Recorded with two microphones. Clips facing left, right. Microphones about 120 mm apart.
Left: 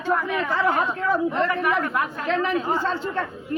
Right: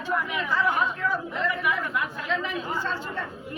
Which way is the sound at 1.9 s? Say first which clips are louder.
Left 4 dB; 45° left (ahead or behind).